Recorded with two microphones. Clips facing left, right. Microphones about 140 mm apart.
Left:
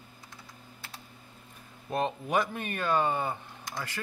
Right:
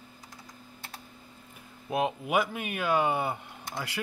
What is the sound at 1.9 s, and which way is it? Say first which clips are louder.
Speech: right 1 dB; 10° right (ahead or behind).